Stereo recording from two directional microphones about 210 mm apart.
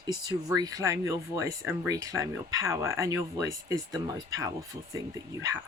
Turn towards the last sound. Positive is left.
turn(degrees=-15)  # may be behind; listen again after turning